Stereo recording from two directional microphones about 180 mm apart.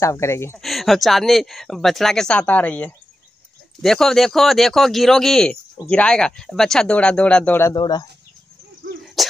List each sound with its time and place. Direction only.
0.0 s speech: 15° left (ahead or behind)
0.6 s speech: centre (ahead or behind)
7.7 s speech: 25° left (ahead or behind)
9.0 s a sound: centre (ahead or behind)